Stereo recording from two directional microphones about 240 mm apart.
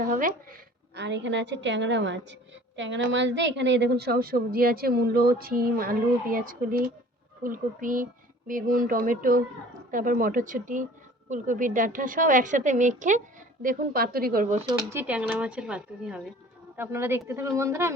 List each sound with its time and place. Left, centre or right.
0.0 s speech: right
0.9 s a woman's voice: right
14.8 s a woman's voice: centre